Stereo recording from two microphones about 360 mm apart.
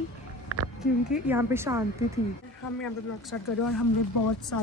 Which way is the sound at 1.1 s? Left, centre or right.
Centre.